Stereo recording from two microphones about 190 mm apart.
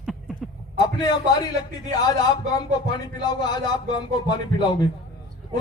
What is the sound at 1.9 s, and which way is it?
A man's voice, 20° left (ahead or behind).